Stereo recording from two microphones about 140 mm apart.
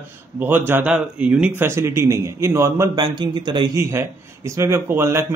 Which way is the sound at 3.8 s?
20° right (ahead or behind).